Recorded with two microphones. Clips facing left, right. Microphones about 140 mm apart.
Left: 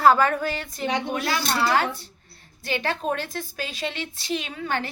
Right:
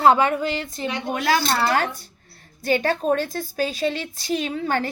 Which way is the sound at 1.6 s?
45° right (ahead or behind).